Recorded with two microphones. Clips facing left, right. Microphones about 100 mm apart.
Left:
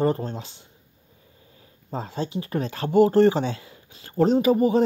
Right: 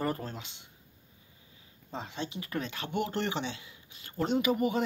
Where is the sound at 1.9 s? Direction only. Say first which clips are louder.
Left 9 dB; 40° left (ahead or behind).